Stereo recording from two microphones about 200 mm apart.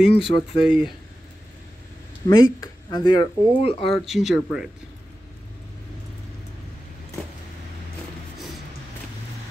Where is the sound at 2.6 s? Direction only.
20° left (ahead or behind).